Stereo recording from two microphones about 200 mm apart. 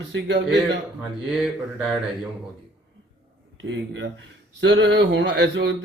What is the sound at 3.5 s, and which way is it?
A man's voice, 65° right (ahead or behind).